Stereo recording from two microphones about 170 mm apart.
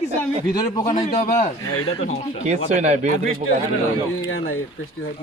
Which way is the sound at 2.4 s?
45° right (ahead or behind).